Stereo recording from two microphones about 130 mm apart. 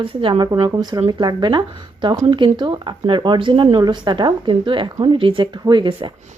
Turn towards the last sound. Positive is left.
turn(degrees=-40)  # may be behind; listen again after turning